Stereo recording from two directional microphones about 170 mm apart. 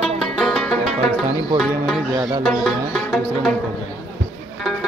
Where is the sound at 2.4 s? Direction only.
5° left (ahead or behind).